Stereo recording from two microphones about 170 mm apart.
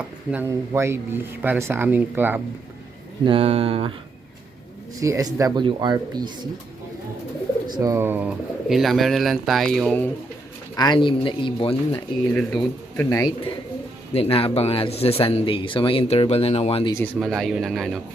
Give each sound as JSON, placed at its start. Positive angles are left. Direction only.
{"t": 0.3, "sound": "speech", "side_deg": -15}
{"t": 3.2, "sound": "speech", "side_deg": -35}
{"t": 4.9, "sound": "speech", "side_deg": -20}
{"t": 7.8, "sound": "speech", "side_deg": -15}
{"t": 8.7, "sound": "speech", "side_deg": 0}
{"t": 10.8, "sound": "speech", "side_deg": 25}
{"t": 12.3, "sound": "speech", "side_deg": 5}
{"t": 14.1, "sound": "speech", "side_deg": 35}
{"t": 17.2, "sound": "speech", "side_deg": 0}